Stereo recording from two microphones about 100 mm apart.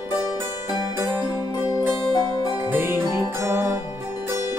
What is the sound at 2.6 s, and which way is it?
Music, 20° right (ahead or behind).